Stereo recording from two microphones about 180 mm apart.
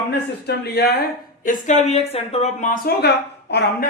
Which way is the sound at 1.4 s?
45° left (ahead or behind).